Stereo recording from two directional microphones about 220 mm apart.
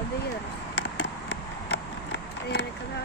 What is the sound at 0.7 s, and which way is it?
Run, 50° left (ahead or behind).